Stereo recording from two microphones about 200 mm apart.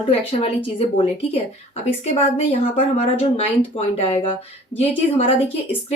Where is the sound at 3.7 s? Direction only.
30° left (ahead or behind).